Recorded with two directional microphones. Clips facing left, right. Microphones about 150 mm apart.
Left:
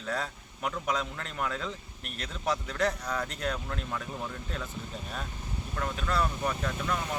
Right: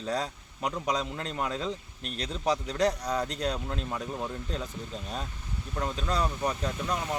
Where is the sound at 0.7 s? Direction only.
15° right (ahead or behind).